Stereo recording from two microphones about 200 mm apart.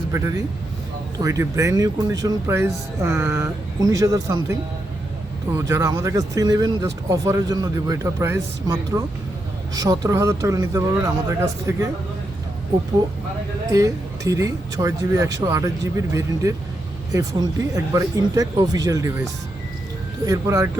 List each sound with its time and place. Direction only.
0.1 s speech: 15° right (ahead or behind)
13.7 s speech: 15° right (ahead or behind)